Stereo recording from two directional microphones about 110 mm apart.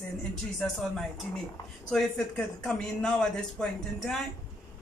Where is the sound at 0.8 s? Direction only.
Centre (ahead or behind).